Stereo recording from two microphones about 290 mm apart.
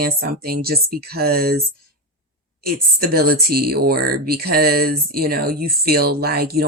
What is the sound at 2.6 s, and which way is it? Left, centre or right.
Speech, right.